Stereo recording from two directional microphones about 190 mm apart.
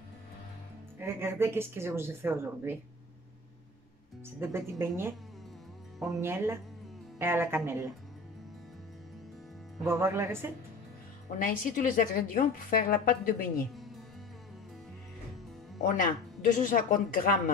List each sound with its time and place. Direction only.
0.9 s a woman's voice: 10° right (ahead or behind)
4.4 s a woman's voice: 15° right (ahead or behind)
9.8 s a woman's voice: 15° right (ahead or behind)
11.3 s a woman's voice: 45° left (ahead or behind)
15.8 s a woman's voice: 45° left (ahead or behind)